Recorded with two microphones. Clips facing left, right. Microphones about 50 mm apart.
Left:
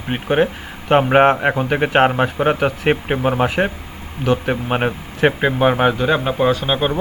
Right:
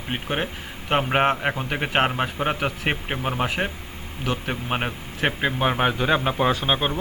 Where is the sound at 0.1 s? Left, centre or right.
Centre.